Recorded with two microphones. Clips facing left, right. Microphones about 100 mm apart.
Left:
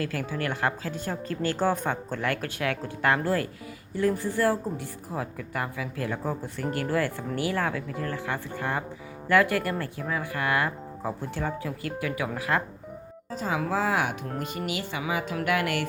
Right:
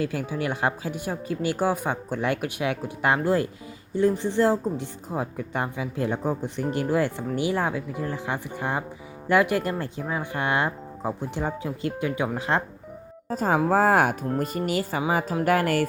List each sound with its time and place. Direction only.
0.0 s speech: 20° right (ahead or behind)
13.3 s speech: 45° right (ahead or behind)